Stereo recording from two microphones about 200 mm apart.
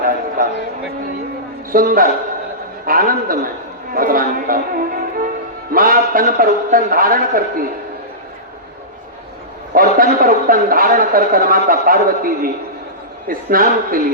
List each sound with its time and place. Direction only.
0.4 s a sound: 45° right (ahead or behind)
1.7 s a man's voice: 45° right (ahead or behind)
9.7 s a man's voice: 45° right (ahead or behind)